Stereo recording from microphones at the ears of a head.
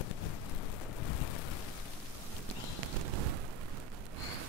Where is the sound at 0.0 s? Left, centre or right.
Left.